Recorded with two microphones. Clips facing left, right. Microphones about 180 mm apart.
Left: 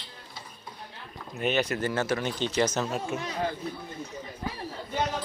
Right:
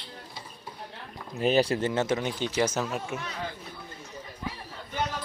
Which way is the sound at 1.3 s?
35° right (ahead or behind).